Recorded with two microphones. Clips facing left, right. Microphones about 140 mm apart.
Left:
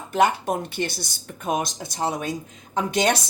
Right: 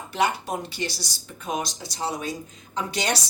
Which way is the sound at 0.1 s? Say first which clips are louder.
Left 5 dB; 50° left (ahead or behind).